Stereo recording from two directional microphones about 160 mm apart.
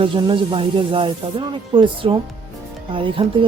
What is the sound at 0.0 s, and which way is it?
Music, 30° right (ahead or behind).